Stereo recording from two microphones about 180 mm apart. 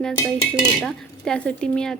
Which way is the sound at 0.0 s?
5° left (ahead or behind).